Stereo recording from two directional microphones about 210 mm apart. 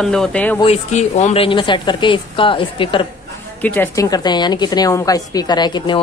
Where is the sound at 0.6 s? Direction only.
30° left (ahead or behind).